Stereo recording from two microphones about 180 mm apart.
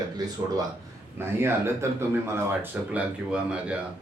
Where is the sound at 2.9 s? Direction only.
5° right (ahead or behind).